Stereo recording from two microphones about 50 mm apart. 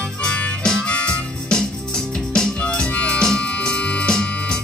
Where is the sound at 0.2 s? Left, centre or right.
Left.